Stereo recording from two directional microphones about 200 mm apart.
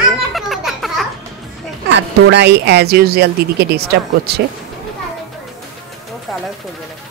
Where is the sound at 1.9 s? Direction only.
60° right (ahead or behind).